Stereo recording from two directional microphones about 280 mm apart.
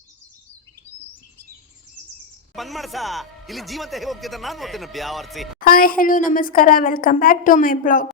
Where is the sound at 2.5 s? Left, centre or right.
Centre.